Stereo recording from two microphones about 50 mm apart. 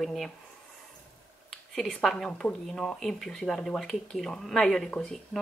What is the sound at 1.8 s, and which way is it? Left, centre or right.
A woman's voice, centre.